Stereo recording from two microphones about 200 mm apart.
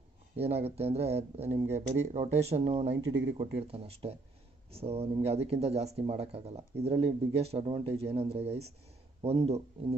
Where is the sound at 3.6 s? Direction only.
30° right (ahead or behind).